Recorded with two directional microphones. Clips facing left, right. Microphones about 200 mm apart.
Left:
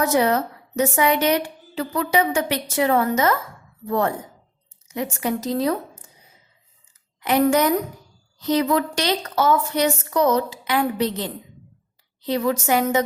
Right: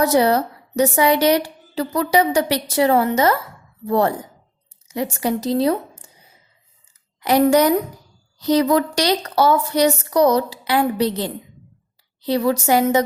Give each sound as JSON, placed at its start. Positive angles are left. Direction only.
{"t": 0.0, "sound": "a woman's voice", "side_deg": -35}
{"t": 7.2, "sound": "a woman's voice", "side_deg": -35}